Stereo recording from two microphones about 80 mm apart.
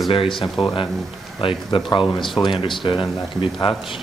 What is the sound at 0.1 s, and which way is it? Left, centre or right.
Speech, left.